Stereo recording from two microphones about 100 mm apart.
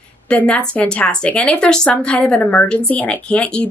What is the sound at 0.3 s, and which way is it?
Speech, 10° left (ahead or behind).